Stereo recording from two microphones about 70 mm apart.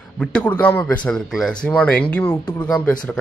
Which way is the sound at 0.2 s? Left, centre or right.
Centre.